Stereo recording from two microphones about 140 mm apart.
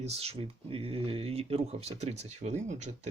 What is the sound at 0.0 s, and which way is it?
Speech, 50° right (ahead or behind).